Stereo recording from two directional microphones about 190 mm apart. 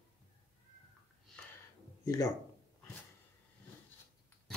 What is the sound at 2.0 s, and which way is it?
Speech, 15° left (ahead or behind).